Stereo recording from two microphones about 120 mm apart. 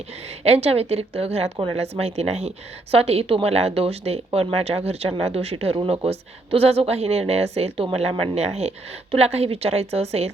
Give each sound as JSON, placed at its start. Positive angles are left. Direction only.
{"t": 0.4, "sound": "speech", "side_deg": -60}